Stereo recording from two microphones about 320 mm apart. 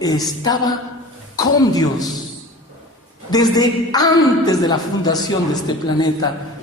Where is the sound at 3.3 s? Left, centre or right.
Centre.